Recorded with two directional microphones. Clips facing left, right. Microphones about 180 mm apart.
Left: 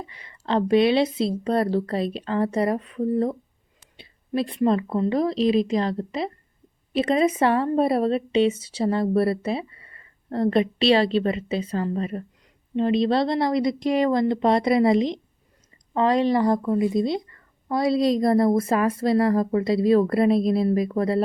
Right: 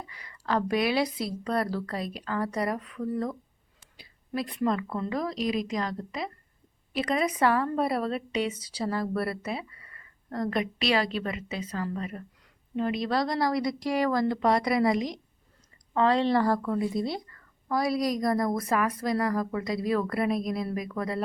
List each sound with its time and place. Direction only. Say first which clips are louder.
0.0 s a woman's voice: left 4 dB; 25° left (ahead or behind)
16.0 s a woman's voice: left 3 dB; 15° left (ahead or behind); by 21.2 s 30° left (ahead or behind)